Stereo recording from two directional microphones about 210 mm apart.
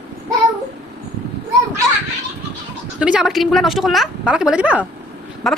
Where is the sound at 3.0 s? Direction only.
5° right (ahead or behind).